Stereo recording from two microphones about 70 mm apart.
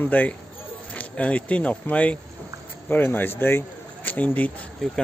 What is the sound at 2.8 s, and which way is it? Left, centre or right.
Speech, left.